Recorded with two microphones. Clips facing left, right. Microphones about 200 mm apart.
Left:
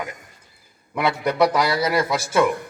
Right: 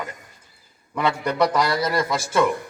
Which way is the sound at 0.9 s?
10° left (ahead or behind).